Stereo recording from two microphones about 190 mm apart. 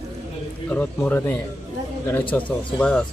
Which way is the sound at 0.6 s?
10° left (ahead or behind).